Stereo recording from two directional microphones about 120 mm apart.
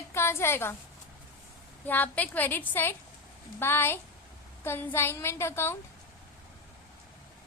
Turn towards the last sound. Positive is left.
turn(degrees=20)  # may be behind; listen again after turning